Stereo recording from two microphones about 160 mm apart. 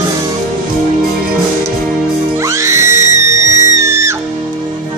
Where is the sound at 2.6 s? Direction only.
15° right (ahead or behind).